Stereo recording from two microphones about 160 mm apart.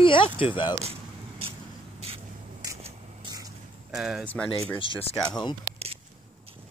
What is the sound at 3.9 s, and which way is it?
Speech, 5° right (ahead or behind).